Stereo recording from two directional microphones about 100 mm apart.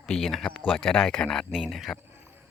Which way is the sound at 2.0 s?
25° right (ahead or behind).